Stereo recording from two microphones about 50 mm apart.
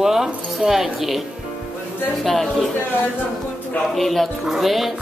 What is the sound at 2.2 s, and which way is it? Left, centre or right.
Speech, centre.